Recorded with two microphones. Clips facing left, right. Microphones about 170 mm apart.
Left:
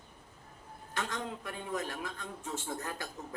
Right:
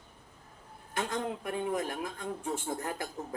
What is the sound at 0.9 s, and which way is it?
A man's voice, 25° right (ahead or behind).